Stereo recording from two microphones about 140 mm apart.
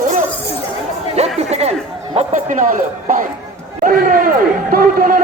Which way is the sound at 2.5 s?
70° right (ahead or behind).